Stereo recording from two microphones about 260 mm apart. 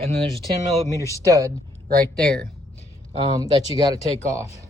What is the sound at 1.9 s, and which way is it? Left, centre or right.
Speech, right.